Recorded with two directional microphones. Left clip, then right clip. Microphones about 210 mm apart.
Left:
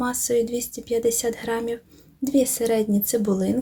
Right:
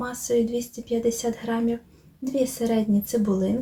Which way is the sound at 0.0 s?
35° left (ahead or behind).